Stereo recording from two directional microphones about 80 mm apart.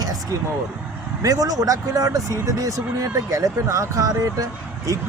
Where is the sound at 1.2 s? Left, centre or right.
Right.